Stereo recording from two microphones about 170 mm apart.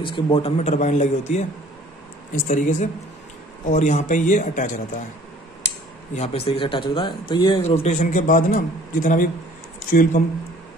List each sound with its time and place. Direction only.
0.0 s a man's voice: 30° left (ahead or behind)
2.4 s a man's voice: 45° left (ahead or behind)
6.1 s speech: 35° left (ahead or behind)
7.7 s a man's voice: 45° left (ahead or behind)